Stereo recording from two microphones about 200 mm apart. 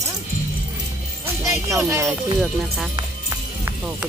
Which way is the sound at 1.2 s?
15° right (ahead or behind).